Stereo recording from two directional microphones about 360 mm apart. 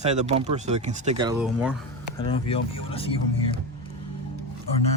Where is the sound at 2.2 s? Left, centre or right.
Centre.